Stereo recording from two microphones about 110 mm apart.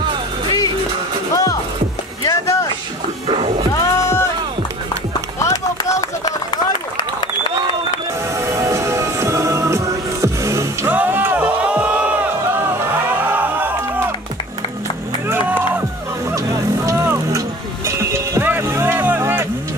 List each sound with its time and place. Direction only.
0.0 s music: 45° right (ahead or behind)
1.3 s music: 30° left (ahead or behind)
2.2 s boat: 30° left (ahead or behind)
3.3 s music: 60° right (ahead or behind)
3.7 s music: 25° left (ahead or behind)
5.4 s run: 30° left (ahead or behind)
8.4 s music: 25° right (ahead or behind)
10.9 s crowd: 15° right (ahead or behind)
15.2 s run: 15° right (ahead or behind)
16.3 s music: 25° right (ahead or behind)